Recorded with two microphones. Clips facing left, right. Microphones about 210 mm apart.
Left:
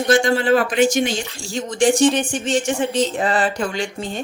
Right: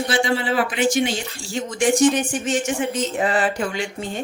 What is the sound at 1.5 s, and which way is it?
Speech, 30° left (ahead or behind).